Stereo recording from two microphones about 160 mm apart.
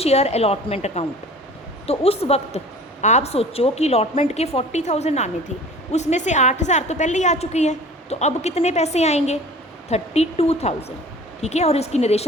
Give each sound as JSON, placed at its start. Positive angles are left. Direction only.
{"t": 0.0, "sound": "a woman's voice", "side_deg": 40}